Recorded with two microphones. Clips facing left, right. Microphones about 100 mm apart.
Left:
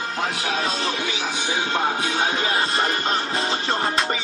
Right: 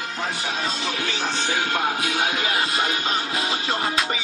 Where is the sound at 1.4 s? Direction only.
20° left (ahead or behind).